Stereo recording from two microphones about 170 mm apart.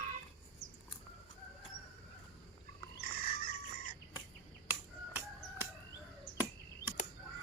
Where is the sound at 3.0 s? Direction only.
60° left (ahead or behind).